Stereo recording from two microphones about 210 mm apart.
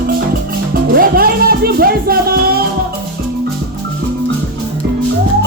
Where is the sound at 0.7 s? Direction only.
45° right (ahead or behind).